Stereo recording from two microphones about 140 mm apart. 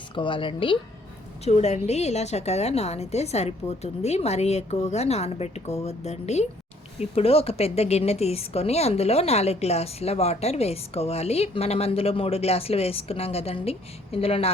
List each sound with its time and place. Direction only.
0.1 s a woman's voice: 35° left (ahead or behind)
1.5 s a woman's voice: 50° left (ahead or behind)